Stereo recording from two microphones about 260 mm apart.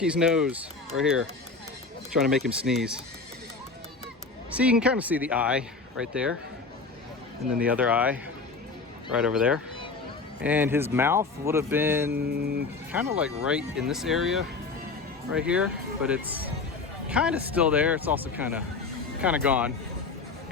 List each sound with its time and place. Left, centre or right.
0.0 s speech: centre
4.5 s speech: centre
7.6 s speech: centre
12.1 s mantra: right
12.9 s speech: centre